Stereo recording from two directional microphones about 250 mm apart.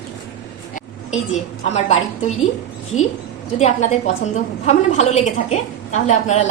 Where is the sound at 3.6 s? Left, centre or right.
Left.